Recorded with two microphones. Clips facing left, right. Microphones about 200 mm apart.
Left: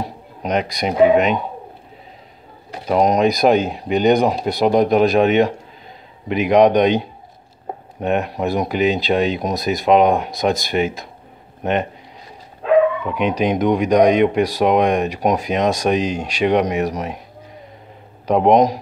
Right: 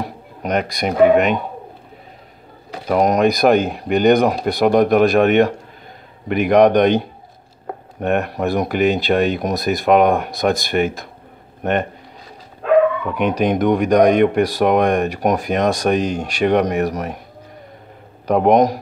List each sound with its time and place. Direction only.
0.0 s speech: 55° right (ahead or behind)
2.9 s speech: 55° right (ahead or behind)
13.0 s speech: 50° right (ahead or behind)
18.2 s speech: 55° right (ahead or behind)